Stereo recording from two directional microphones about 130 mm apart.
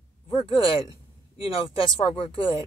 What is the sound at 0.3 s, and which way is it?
Speech, 40° left (ahead or behind).